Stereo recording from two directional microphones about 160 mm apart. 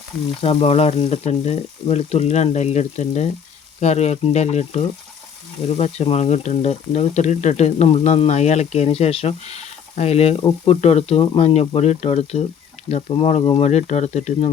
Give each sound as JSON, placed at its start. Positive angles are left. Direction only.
{"t": 0.4, "sound": "frying", "side_deg": 40}
{"t": 3.8, "sound": "speech", "side_deg": 45}